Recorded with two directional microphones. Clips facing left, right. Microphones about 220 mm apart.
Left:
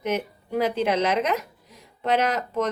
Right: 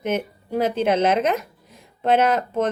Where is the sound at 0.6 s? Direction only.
50° right (ahead or behind).